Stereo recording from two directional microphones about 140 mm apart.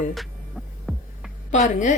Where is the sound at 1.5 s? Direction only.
60° left (ahead or behind).